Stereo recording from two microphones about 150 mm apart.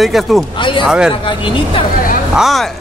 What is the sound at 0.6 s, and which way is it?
Speech, 35° left (ahead or behind).